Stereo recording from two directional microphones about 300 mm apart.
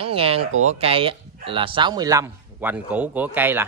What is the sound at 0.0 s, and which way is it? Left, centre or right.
Speech, centre.